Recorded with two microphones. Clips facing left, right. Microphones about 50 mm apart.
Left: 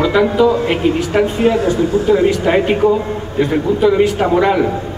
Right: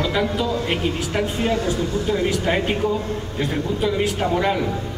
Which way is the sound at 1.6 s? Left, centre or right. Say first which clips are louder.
Left 9 dB; left.